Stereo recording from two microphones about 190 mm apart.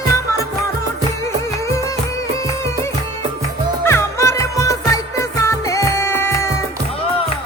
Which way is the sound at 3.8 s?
15° left (ahead or behind).